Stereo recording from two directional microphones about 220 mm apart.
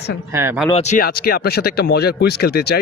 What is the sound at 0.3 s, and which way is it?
Speech, 10° right (ahead or behind).